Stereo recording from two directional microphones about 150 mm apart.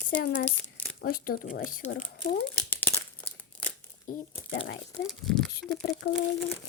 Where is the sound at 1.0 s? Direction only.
75° left (ahead or behind).